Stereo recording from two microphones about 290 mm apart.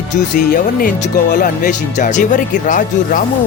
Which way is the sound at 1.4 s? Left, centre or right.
Left.